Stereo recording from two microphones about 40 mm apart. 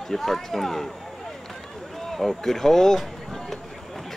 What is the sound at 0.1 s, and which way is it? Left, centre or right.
Speech, centre.